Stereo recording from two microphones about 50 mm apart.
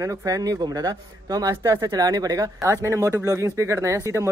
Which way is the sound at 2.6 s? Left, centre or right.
Right.